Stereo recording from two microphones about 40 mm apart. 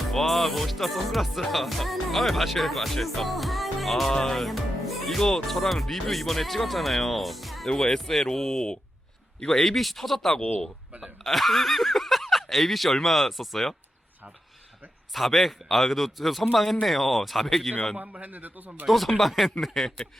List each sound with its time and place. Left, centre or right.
0.1 s music: centre
4.1 s speech: centre
4.4 s music: centre
7.8 s speech: centre
9.6 s music: centre
11.2 s speech: centre
12.5 s music: centre
15.1 s music: centre
18.2 s a man's voice: right
18.9 s music: centre
19.5 s speech: centre